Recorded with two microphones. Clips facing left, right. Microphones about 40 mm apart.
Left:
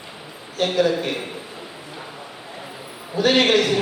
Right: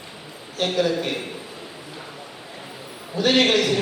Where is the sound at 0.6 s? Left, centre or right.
Centre.